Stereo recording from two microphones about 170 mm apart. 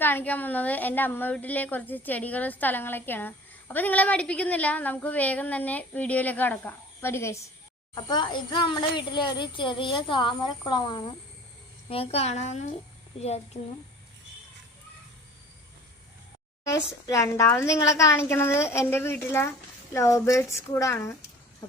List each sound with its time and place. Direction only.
0.0 s a woman's voice: 10° left (ahead or behind)
11.9 s speech: 35° left (ahead or behind)
16.6 s a woman's voice: 20° left (ahead or behind)